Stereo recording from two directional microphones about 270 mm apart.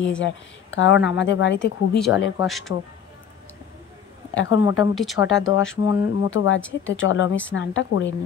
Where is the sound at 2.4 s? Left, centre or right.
Centre.